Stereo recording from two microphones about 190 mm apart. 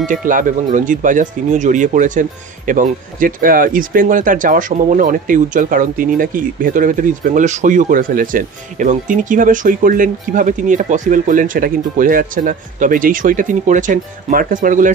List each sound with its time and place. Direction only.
0.0 s speech: 45° right (ahead or behind)